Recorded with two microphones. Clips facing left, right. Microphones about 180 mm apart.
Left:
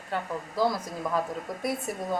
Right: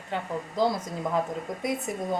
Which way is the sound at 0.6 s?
25° right (ahead or behind).